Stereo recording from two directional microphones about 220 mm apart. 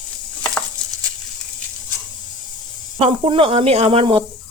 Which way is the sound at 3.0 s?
25° right (ahead or behind).